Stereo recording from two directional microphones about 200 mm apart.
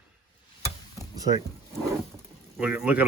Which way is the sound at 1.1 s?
20° right (ahead or behind).